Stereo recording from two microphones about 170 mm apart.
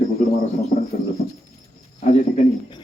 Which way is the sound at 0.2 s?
40° left (ahead or behind).